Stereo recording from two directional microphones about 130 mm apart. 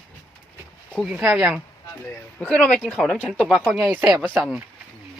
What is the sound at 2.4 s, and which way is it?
Speech, 10° left (ahead or behind).